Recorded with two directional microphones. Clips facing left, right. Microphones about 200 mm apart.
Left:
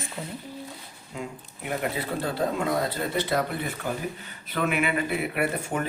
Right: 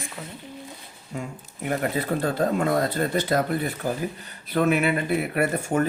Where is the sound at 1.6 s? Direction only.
45° right (ahead or behind).